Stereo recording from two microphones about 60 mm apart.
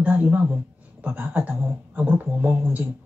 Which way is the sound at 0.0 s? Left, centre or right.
Right.